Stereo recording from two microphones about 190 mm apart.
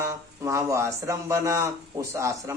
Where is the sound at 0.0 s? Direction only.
15° right (ahead or behind).